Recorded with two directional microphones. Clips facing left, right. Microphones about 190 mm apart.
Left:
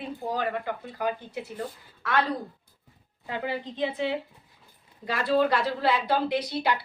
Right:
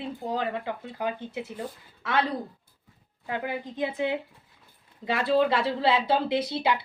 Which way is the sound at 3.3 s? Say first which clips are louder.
Even; 10° right (ahead or behind).